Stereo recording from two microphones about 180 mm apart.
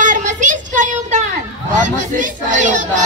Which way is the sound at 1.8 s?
45° right (ahead or behind).